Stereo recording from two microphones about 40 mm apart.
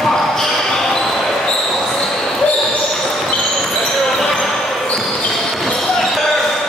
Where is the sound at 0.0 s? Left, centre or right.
Centre.